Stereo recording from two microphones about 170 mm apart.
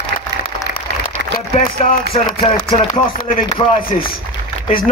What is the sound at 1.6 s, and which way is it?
Speech, 55° left (ahead or behind).